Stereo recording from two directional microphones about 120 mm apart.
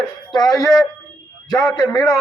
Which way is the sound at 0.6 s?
Centre (ahead or behind).